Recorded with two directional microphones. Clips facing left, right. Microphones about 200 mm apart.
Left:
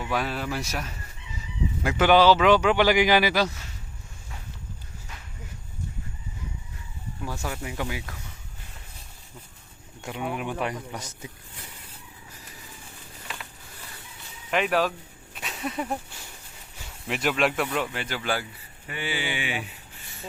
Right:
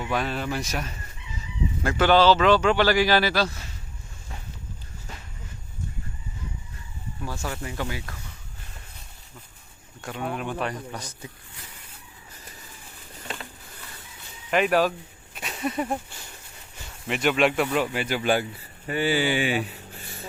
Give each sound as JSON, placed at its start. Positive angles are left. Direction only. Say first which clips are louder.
{"t": 0.1, "sound": "a man's voice", "louder": "right 1 dB", "side_deg": 5}
{"t": 7.3, "sound": "a man's voice", "louder": "even", "side_deg": 10}
{"t": 10.0, "sound": "a man's voice", "louder": "even", "side_deg": 15}
{"t": 14.5, "sound": "speech", "louder": "right 3 dB", "side_deg": 0}
{"t": 15.4, "sound": "a sound", "louder": "right 3 dB", "side_deg": 0}
{"t": 17.1, "sound": "speech", "louder": "right 3 dB", "side_deg": 0}
{"t": 17.7, "sound": "speech", "louder": "right 4 dB", "side_deg": -10}
{"t": 18.9, "sound": "speech", "louder": "right 8 dB", "side_deg": -40}